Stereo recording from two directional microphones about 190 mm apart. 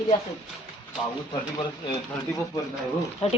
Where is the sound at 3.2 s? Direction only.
30° left (ahead or behind).